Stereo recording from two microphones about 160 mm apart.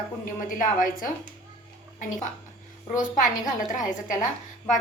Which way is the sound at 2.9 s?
55° left (ahead or behind).